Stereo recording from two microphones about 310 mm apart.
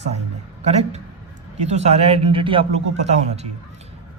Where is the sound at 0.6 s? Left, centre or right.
Right.